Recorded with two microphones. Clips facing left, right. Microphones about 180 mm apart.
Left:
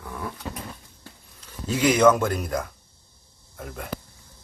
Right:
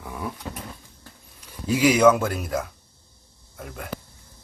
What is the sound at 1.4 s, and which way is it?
Speech, 10° right (ahead or behind).